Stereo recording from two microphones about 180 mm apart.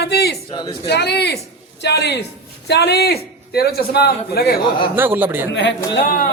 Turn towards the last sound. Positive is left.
turn(degrees=50)  # may be behind; listen again after turning